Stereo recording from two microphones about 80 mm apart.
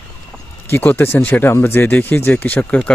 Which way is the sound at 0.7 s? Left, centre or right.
Left.